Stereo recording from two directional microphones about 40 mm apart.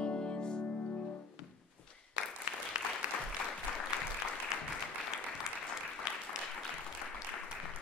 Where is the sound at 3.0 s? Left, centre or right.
Right.